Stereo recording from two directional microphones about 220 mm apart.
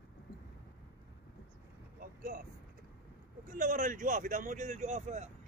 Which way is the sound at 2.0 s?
40° right (ahead or behind).